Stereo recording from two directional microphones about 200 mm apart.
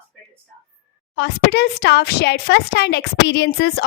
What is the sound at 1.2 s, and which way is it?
Speech, 55° left (ahead or behind).